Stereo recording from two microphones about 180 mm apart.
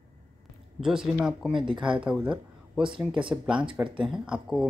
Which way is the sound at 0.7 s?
Centre (ahead or behind).